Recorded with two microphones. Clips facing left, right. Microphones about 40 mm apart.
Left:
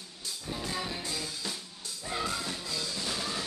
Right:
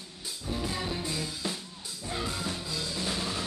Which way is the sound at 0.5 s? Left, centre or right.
Centre.